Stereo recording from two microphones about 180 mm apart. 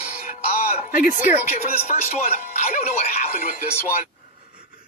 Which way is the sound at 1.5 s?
35° left (ahead or behind).